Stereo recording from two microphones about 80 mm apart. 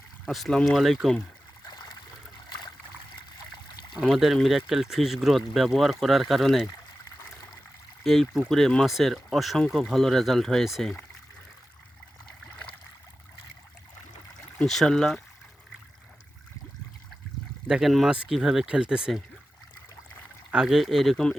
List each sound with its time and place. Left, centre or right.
0.3 s speech: centre
1.6 s stream: left
3.9 s speech: centre
8.0 s speech: centre
14.6 s speech: centre
17.7 s speech: centre
18.1 s speech: centre
20.5 s speech: centre